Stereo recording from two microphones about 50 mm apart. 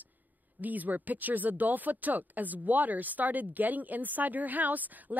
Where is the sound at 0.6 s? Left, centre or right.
Right.